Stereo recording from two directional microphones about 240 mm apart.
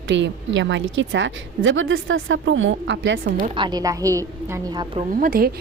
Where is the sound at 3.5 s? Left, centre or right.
Centre.